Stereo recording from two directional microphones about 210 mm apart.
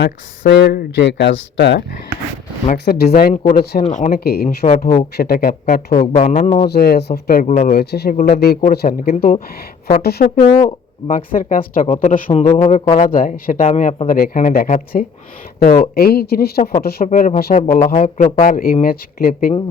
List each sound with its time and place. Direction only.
0.0 s speech: 55° left (ahead or behind)
3.8 s a man's voice: 35° left (ahead or behind)
6.1 s a man's voice: 30° left (ahead or behind)
6.7 s speech: 50° left (ahead or behind); by 7.7 s 35° left (ahead or behind)
7.7 s speech: 50° left (ahead or behind)
8.1 s a man's voice: 35° left (ahead or behind)
8.7 s speech: 45° left (ahead or behind)
9.1 s a man's voice: 30° left (ahead or behind)
10.0 s a man's voice: 50° left (ahead or behind)